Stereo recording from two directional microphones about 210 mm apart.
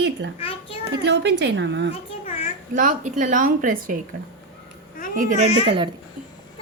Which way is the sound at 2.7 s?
35° right (ahead or behind).